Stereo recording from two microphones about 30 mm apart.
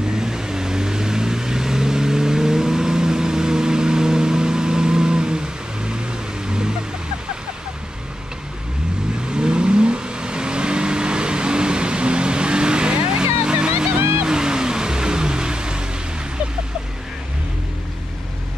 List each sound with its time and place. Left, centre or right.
0.2 s vehicle: centre
6.4 s a sound: right
9.3 s vehicle: right
14.2 s music: right